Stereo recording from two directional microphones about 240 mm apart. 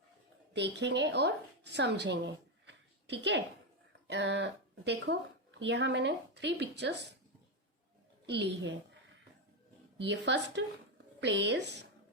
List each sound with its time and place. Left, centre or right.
0.5 s a woman's voice: right
8.3 s speech: right
10.0 s speech: right